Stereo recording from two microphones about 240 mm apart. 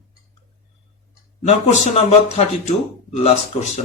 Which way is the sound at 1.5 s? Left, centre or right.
Left.